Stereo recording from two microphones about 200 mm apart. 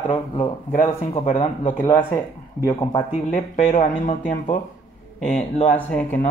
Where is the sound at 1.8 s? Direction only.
10° left (ahead or behind).